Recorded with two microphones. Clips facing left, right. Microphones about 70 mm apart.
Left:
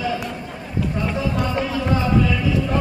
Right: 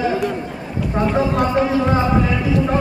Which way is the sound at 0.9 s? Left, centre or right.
Right.